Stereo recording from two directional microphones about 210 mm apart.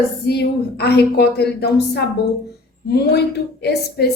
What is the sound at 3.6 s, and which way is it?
Speech, 50° left (ahead or behind).